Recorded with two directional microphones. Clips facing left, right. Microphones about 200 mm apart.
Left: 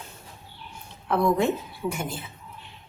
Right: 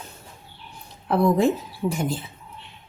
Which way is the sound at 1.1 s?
35° right (ahead or behind).